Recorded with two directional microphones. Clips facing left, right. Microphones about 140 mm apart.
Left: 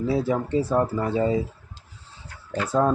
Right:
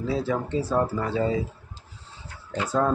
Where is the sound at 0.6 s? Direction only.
20° left (ahead or behind).